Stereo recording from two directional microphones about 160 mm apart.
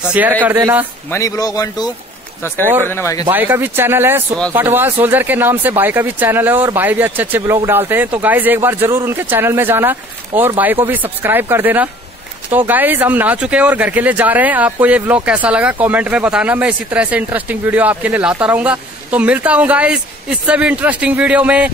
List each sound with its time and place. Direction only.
0.1 s speech: 10° right (ahead or behind)
1.1 s a man's voice: 20° left (ahead or behind)
3.3 s speech: 15° right (ahead or behind)